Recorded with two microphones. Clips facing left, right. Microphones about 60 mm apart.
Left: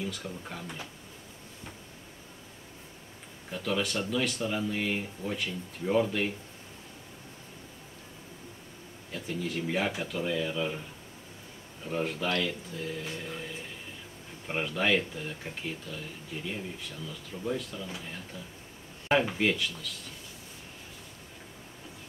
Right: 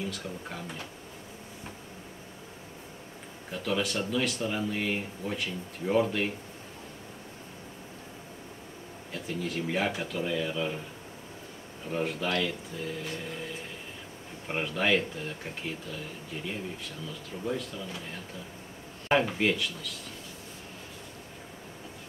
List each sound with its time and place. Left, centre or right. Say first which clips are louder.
0.0 s speech: right 1 dB; centre
3.5 s speech: right 1 dB; centre
9.1 s speech: even; centre
11.8 s speech: even; centre
13.0 s vehicle: right 1 dB; centre
13.3 s speech: right 1 dB; centre